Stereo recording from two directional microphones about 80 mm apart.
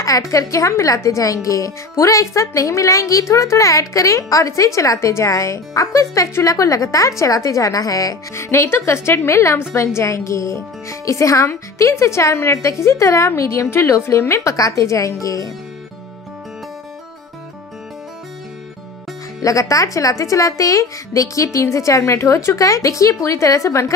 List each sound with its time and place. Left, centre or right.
0.0 s speech: left
8.5 s a woman's voice: left
19.4 s speech: left